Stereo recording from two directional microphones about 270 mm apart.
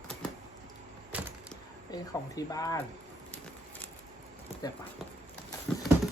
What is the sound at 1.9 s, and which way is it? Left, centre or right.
Speech, centre.